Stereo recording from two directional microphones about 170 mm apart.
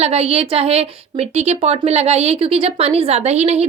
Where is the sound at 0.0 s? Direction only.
35° right (ahead or behind).